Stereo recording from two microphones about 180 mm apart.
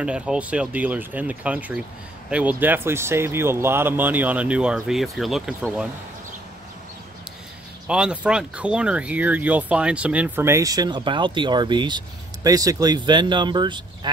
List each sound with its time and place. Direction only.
0.0 s speech: 5° right (ahead or behind)
7.8 s speech: 5° right (ahead or behind); by 13.8 s 25° right (ahead or behind)